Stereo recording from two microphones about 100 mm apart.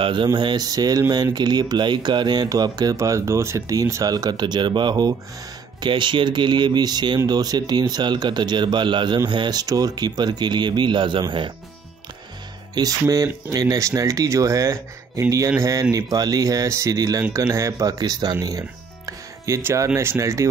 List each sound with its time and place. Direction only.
0.0 s speech: 50° right (ahead or behind)
12.8 s speech: 45° right (ahead or behind); by 20.4 s 30° right (ahead or behind)